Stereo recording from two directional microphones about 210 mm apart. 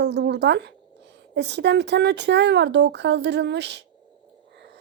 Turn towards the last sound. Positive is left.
turn(degrees=-55)  # may be behind; listen again after turning